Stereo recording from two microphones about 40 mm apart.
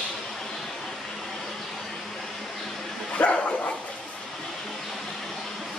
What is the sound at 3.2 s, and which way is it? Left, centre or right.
Dog, left.